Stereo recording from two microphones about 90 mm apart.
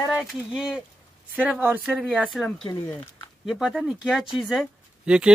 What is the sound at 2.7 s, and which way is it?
Speech, 35° left (ahead or behind).